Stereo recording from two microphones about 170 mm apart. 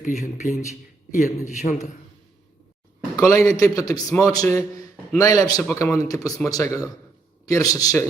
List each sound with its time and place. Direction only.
0.0 s a man's voice: 45° left (ahead or behind)
3.2 s a man's voice: 20° left (ahead or behind)